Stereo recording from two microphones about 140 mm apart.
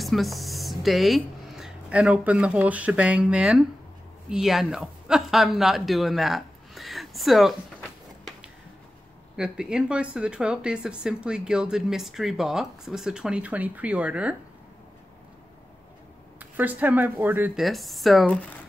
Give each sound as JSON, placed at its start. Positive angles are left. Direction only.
{"t": 0.0, "sound": "speech", "side_deg": 0}
{"t": 16.3, "sound": "speech", "side_deg": -10}
{"t": 17.6, "sound": "speech", "side_deg": 0}